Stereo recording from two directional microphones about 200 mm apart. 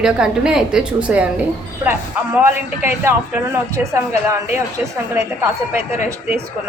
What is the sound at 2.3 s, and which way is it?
A woman's voice, 10° right (ahead or behind).